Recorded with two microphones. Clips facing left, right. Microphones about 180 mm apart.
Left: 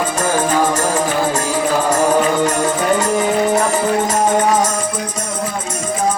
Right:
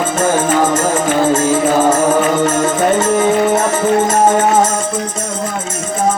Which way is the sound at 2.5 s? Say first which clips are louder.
Right 3 dB; 20° right (ahead or behind).